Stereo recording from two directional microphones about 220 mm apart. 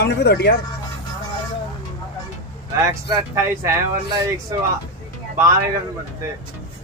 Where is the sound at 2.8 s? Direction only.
15° right (ahead or behind).